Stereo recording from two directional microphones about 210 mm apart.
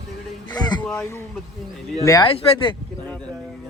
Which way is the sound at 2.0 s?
15° left (ahead or behind).